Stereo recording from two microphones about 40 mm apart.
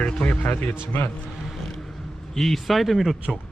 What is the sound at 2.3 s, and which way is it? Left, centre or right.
Speech, centre.